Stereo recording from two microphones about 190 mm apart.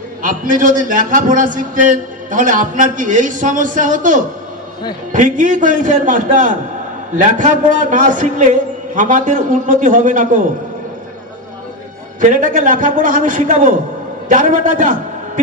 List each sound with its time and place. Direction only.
0.2 s a man's voice: 45° right (ahead or behind)
12.2 s a man's voice: 45° right (ahead or behind)